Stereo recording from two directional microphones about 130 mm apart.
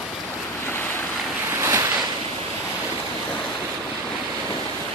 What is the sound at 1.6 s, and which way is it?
Waves, 20° right (ahead or behind).